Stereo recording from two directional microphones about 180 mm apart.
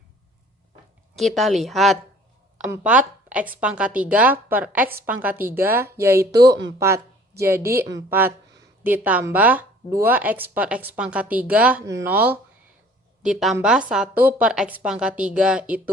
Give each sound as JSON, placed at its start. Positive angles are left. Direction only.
{"t": 1.1, "sound": "speech", "side_deg": 0}
{"t": 6.3, "sound": "speech", "side_deg": -65}
{"t": 6.7, "sound": "a woman's voice", "side_deg": -15}